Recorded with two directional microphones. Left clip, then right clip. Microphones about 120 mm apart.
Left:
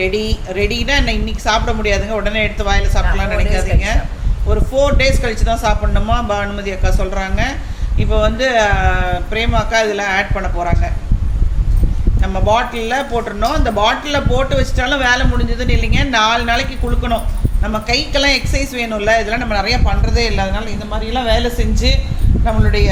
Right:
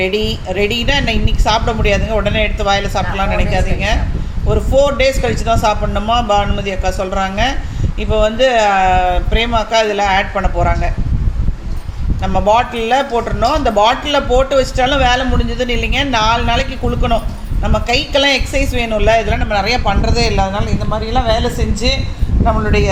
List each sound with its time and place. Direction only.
0.0 s a woman's voice: 20° right (ahead or behind)
12.2 s a woman's voice: 20° right (ahead or behind)